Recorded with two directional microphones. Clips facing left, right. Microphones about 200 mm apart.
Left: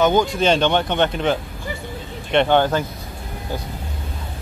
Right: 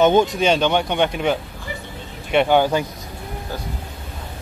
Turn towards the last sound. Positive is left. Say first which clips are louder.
# even
turn(degrees=-10)  # may be behind; listen again after turning